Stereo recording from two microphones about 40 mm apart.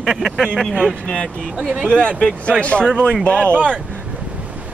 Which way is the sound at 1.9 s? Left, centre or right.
Left.